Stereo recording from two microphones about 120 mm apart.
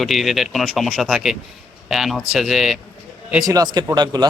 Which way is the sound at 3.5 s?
35° right (ahead or behind).